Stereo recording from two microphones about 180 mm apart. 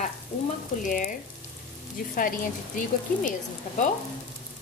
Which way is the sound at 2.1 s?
50° left (ahead or behind).